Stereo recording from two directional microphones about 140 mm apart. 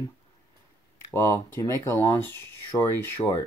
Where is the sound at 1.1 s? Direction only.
20° left (ahead or behind).